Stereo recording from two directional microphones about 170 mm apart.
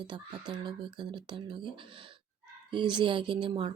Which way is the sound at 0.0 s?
25° right (ahead or behind).